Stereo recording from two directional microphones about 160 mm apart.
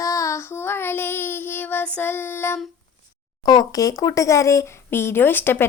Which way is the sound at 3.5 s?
25° left (ahead or behind).